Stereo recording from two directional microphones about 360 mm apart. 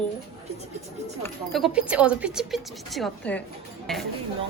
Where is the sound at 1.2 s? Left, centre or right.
Centre.